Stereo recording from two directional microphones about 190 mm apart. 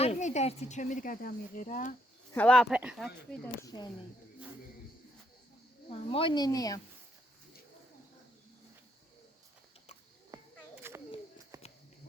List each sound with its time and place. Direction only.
0.0 s speech: 35° left (ahead or behind)
2.3 s speech: 5° left (ahead or behind)
3.4 s speech: 20° left (ahead or behind)
5.9 s a woman's voice: 30° left (ahead or behind)
10.3 s children playing: 15° right (ahead or behind)
11.5 s a sound: 20° right (ahead or behind)